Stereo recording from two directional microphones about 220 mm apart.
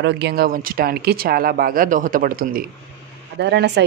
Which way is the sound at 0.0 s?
50° right (ahead or behind).